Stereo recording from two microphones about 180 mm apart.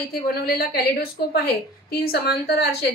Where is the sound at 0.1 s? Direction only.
60° left (ahead or behind).